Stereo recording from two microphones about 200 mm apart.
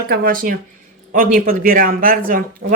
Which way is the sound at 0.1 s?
50° right (ahead or behind).